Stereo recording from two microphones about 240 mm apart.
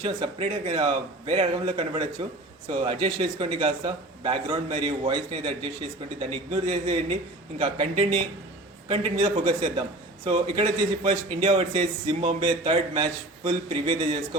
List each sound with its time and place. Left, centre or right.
0.0 s a man's voice: right